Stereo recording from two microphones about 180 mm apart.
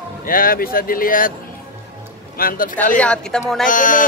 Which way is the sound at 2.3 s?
55° left (ahead or behind).